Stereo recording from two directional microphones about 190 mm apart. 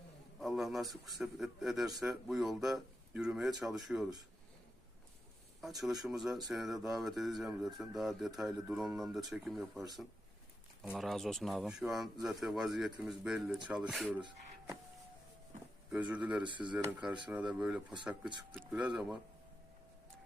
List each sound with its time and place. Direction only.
0.3 s a man's voice: centre (ahead or behind)
5.6 s a man's voice: centre (ahead or behind)
10.8 s a man's voice: centre (ahead or behind)
14.2 s speech: 25° right (ahead or behind)
15.9 s speech: 5° right (ahead or behind)
16.4 s speech: 25° right (ahead or behind)
16.7 s a man's voice: 5° right (ahead or behind)